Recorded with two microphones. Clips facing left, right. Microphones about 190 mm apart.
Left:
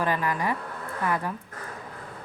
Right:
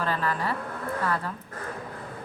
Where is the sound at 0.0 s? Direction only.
15° left (ahead or behind).